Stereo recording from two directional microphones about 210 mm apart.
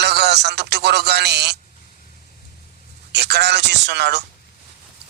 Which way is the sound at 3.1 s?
50° right (ahead or behind).